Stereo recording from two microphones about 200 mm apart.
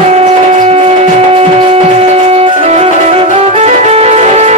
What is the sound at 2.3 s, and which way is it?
Music, 30° right (ahead or behind).